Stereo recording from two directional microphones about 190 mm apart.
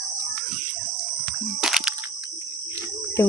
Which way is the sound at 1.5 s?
5° right (ahead or behind).